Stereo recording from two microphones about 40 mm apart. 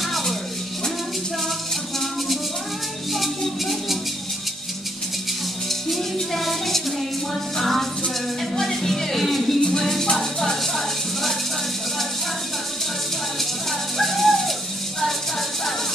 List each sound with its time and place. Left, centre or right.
0.0 s music: centre
3.1 s music: centre
5.7 s music: centre
9.6 s music: left
9.8 s music: centre
13.4 s music: centre